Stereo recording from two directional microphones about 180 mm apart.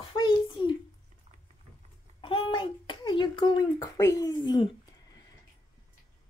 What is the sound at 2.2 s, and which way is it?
A child's voice, 25° left (ahead or behind).